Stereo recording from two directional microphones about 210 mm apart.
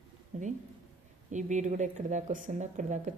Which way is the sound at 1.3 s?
35° right (ahead or behind).